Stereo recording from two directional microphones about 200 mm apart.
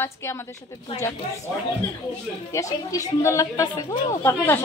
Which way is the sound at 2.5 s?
15° left (ahead or behind).